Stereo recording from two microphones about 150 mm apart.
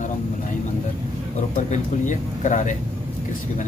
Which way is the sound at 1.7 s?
55° left (ahead or behind).